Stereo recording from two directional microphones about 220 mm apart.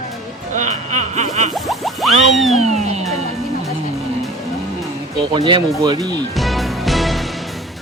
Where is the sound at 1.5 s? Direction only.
Centre (ahead or behind).